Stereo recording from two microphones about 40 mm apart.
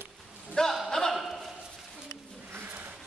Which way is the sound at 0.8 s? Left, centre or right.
Centre.